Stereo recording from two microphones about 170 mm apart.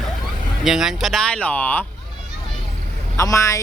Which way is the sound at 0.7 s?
5° right (ahead or behind).